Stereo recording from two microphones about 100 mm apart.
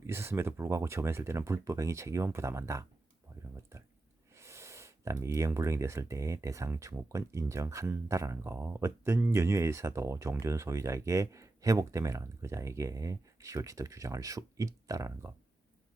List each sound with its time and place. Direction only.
0.1 s speech: 25° right (ahead or behind)
4.4 s speech: 30° right (ahead or behind)